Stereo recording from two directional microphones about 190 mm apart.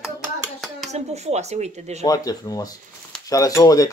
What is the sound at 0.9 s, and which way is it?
Speech, 35° right (ahead or behind).